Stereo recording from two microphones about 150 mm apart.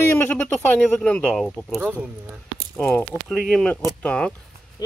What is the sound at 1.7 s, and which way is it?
Speech, 10° right (ahead or behind).